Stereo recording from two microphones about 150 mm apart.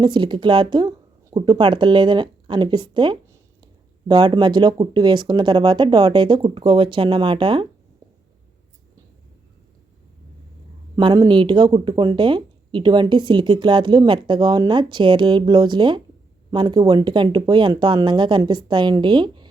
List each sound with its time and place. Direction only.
0.0 s speech: 30° right (ahead or behind)
10.9 s speech: 30° right (ahead or behind)